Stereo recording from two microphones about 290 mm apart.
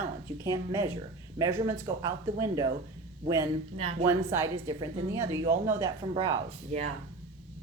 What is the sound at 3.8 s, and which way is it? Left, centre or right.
Speech, right.